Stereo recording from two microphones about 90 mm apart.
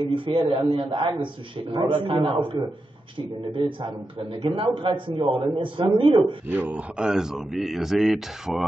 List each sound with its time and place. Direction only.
0.1 s a man's voice: 70° right (ahead or behind)
3.8 s a man's voice: 65° right (ahead or behind)
6.5 s speech: 15° right (ahead or behind)